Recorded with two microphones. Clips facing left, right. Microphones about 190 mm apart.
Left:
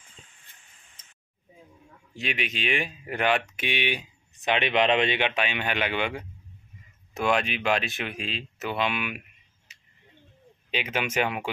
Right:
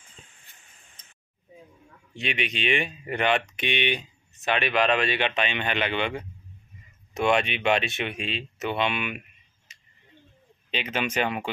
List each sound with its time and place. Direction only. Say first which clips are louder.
2.1 s speech: right 2 dB; 5° left (ahead or behind)
9.7 s a sound: right 1 dB; 10° left (ahead or behind)
10.7 s speech: even; 10° left (ahead or behind)